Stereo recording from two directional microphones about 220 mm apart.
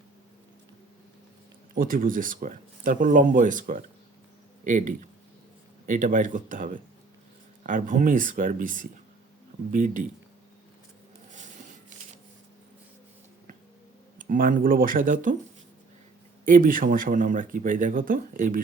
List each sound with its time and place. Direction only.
1.7 s speech: 40° right (ahead or behind)
14.2 s speech: 40° right (ahead or behind)
16.5 s speech: 40° right (ahead or behind)